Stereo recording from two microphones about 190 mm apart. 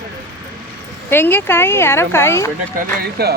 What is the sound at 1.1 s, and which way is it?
Speech, 10° left (ahead or behind).